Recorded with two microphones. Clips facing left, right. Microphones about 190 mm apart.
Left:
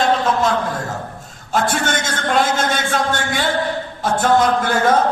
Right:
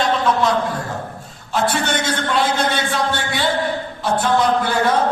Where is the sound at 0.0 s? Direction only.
45° left (ahead or behind).